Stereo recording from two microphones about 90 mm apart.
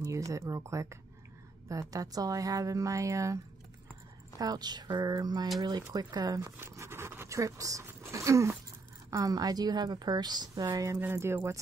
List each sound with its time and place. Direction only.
0.0 s a woman's voice: 40° right (ahead or behind)
4.4 s a woman's voice: 50° right (ahead or behind)
6.6 s a woman's voice: 30° right (ahead or behind); by 10.9 s 45° right (ahead or behind)
11.0 s speech: 25° right (ahead or behind)